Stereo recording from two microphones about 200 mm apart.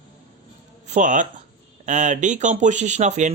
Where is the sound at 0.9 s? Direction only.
40° right (ahead or behind).